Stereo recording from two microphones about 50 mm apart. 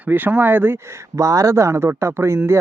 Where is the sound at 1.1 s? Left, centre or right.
Right.